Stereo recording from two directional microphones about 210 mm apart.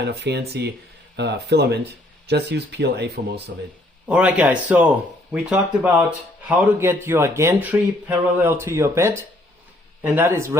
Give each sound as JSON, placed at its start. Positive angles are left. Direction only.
{"t": 0.0, "sound": "speech", "side_deg": -50}
{"t": 4.1, "sound": "a man's voice", "side_deg": -5}